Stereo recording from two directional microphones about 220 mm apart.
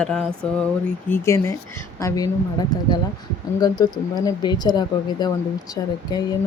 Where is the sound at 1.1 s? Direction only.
10° left (ahead or behind).